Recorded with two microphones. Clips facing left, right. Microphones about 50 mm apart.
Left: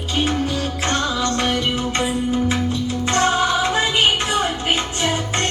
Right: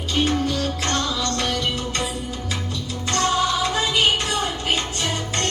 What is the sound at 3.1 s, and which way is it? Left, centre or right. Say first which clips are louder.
Music: left 2 dB; left.